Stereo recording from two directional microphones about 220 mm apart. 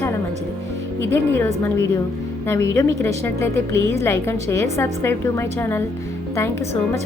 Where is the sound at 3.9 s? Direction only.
10° left (ahead or behind).